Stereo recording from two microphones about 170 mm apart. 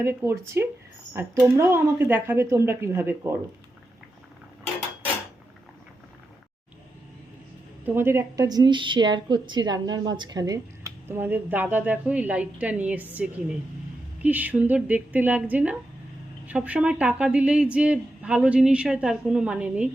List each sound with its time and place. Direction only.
0.0 s a woman's voice: 15° right (ahead or behind)
7.9 s a woman's voice: 15° right (ahead or behind)
14.2 s a woman's voice: 10° right (ahead or behind)